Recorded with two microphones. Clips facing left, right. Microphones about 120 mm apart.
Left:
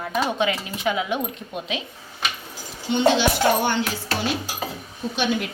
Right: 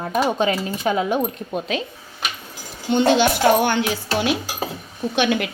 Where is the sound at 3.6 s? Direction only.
65° right (ahead or behind).